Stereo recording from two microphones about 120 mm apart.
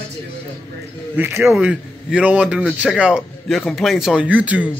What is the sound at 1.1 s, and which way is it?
Speech, 20° right (ahead or behind).